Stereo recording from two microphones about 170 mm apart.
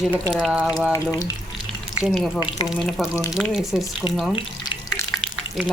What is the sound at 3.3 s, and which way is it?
Speech, centre (ahead or behind).